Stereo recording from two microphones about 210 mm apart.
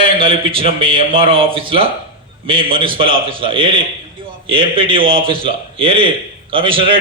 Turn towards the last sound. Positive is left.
turn(degrees=-25)  # may be behind; listen again after turning